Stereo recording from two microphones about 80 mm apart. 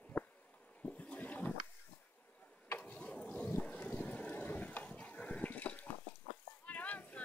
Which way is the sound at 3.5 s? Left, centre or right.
Left.